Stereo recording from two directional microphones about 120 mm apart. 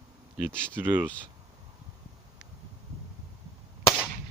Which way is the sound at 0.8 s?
15° right (ahead or behind).